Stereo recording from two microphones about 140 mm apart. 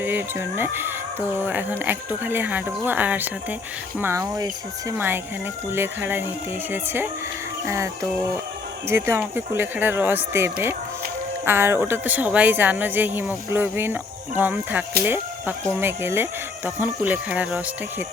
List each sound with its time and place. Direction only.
0.0 s a woman's voice: 15° right (ahead or behind)
4.2 s speech: 30° right (ahead or behind)
4.9 s a woman's voice: 15° right (ahead or behind)
8.9 s a woman's voice: 15° right (ahead or behind)